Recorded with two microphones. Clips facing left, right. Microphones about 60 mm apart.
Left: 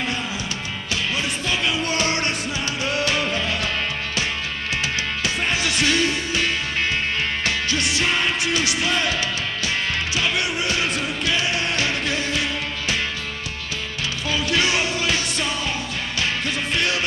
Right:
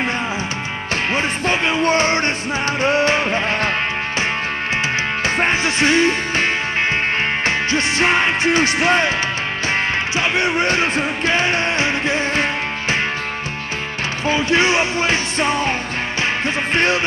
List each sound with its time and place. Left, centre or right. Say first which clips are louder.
1.1 s music: right 7 dB; right
5.2 s music: right 6 dB; right
10.1 s music: right 6 dB; right
14.2 s music: right 6 dB; right